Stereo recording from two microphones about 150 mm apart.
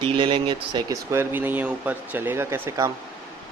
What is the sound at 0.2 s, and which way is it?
Speech, 35° right (ahead or behind).